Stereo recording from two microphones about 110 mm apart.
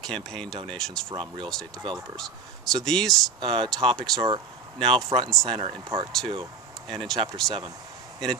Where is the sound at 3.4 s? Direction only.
45° right (ahead or behind).